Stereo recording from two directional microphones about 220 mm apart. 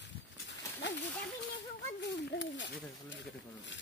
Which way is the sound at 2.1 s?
55° left (ahead or behind).